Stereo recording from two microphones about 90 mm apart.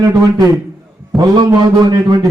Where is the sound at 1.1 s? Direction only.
Centre (ahead or behind).